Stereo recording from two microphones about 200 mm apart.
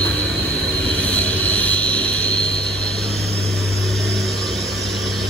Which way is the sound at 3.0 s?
30° right (ahead or behind).